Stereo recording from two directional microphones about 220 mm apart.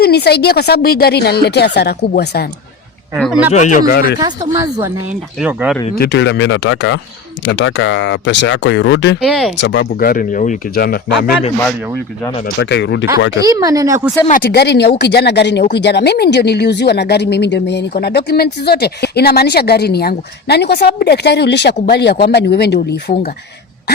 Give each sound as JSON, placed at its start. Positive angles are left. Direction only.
{"t": 0.0, "sound": "speech", "side_deg": 45}
{"t": 3.5, "sound": "speech", "side_deg": 35}
{"t": 4.2, "sound": "speech", "side_deg": -15}
{"t": 6.0, "sound": "speech", "side_deg": 50}
{"t": 9.2, "sound": "speech", "side_deg": 0}
{"t": 9.6, "sound": "speech", "side_deg": 55}
{"t": 12.5, "sound": "speech", "side_deg": 50}
{"t": 13.4, "sound": "speech", "side_deg": -15}
{"t": 14.3, "sound": "speech", "side_deg": 45}